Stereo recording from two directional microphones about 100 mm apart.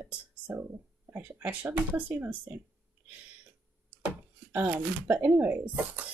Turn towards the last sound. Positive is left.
turn(degrees=-15)  # may be behind; listen again after turning